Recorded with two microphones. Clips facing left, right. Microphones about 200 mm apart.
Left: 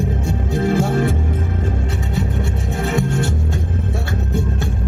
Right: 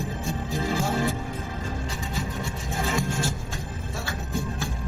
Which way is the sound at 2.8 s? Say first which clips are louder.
Left 7 dB; 65° left (ahead or behind).